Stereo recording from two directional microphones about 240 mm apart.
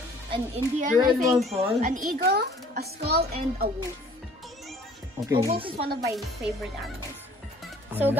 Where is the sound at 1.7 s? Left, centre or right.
Right.